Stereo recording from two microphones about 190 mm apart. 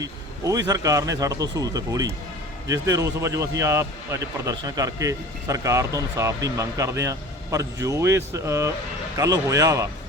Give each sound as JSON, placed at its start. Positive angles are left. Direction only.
{"t": 0.0, "sound": "speech", "side_deg": -20}